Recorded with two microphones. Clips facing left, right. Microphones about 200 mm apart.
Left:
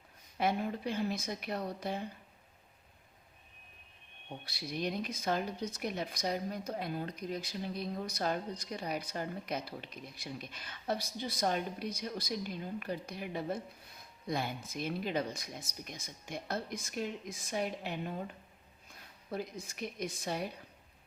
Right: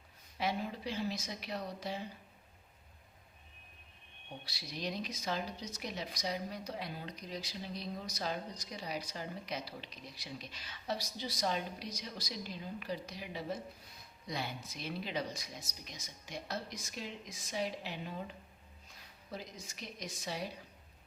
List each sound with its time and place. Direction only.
0.3 s speech: 55° left (ahead or behind)
4.4 s speech: 55° left (ahead or behind)
19.3 s speech: 55° left (ahead or behind)